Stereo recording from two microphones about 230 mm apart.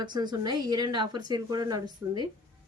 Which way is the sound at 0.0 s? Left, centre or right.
Centre.